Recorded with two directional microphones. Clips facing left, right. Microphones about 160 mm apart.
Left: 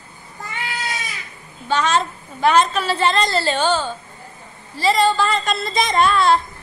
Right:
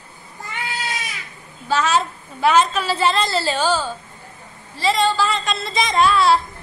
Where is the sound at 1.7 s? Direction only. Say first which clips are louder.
Even; 5° right (ahead or behind).